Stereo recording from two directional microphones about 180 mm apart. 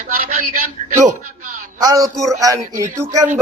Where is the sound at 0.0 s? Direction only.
50° right (ahead or behind).